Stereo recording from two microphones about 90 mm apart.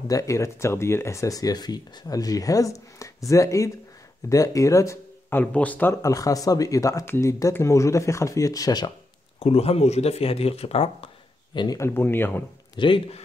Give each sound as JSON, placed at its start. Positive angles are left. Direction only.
{"t": 0.1, "sound": "speech", "side_deg": 35}
{"t": 5.3, "sound": "speech", "side_deg": 15}
{"t": 6.0, "sound": "speech", "side_deg": 40}
{"t": 9.4, "sound": "speech", "side_deg": 90}
{"t": 11.5, "sound": "speech", "side_deg": 50}
{"t": 11.8, "sound": "speech", "side_deg": 25}
{"t": 12.7, "sound": "a man's voice", "side_deg": 65}